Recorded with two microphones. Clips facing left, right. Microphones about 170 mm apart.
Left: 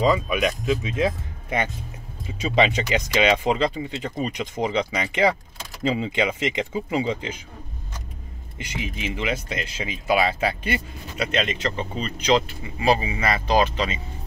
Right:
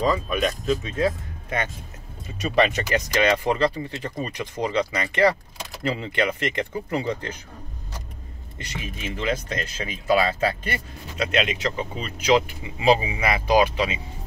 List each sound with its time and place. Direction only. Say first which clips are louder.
0.0 s speech: left 2 dB; 10° left (ahead or behind)
8.5 s speech: left 3 dB; 15° left (ahead or behind)
11.3 s speech: right 1 dB; 5° right (ahead or behind)